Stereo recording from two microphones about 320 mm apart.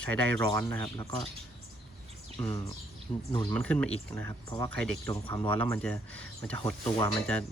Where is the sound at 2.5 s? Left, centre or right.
Centre.